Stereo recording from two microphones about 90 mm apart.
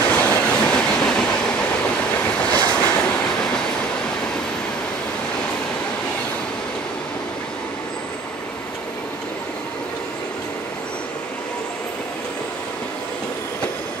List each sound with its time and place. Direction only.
0.0 s train: 20° left (ahead or behind)